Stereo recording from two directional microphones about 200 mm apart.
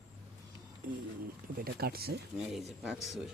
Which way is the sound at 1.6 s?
50° right (ahead or behind).